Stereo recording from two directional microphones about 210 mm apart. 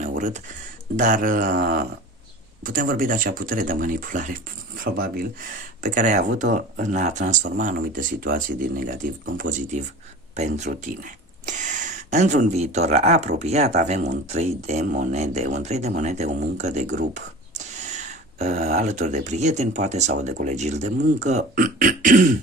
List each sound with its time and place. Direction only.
0.2 s speech: 35° right (ahead or behind)